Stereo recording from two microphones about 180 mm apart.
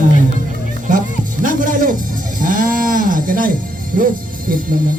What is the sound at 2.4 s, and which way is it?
Speech, 50° right (ahead or behind).